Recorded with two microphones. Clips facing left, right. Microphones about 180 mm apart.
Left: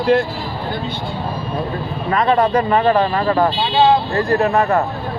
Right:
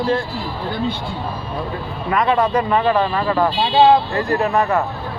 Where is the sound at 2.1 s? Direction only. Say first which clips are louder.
Left 2 dB; 40° left (ahead or behind).